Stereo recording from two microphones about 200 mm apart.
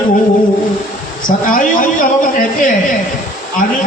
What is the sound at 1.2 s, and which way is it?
A man's voice, 40° left (ahead or behind).